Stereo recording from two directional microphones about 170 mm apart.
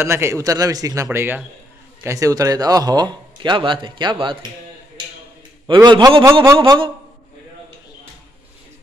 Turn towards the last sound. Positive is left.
turn(degrees=-30)  # may be behind; listen again after turning